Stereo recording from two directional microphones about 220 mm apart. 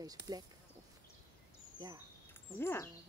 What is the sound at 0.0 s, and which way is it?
Speech, 15° right (ahead or behind).